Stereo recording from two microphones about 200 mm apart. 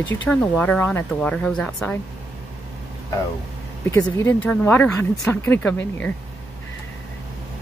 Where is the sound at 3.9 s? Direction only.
15° left (ahead or behind).